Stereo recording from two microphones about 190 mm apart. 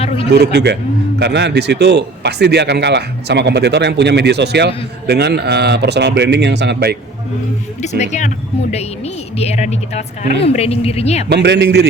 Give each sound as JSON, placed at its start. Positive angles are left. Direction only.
{"t": 0.3, "sound": "a man's voice", "side_deg": -60}
{"t": 7.8, "sound": "a woman's voice", "side_deg": 40}
{"t": 9.4, "sound": "a woman's voice", "side_deg": 35}
{"t": 11.3, "sound": "a man's voice", "side_deg": -65}